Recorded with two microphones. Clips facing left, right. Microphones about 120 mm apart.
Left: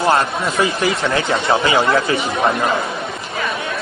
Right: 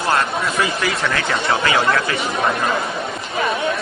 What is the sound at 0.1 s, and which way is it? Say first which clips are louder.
Speech: left 2 dB; 25° left (ahead or behind).